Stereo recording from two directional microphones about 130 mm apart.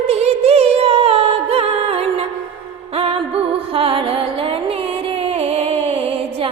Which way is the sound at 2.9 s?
50° right (ahead or behind).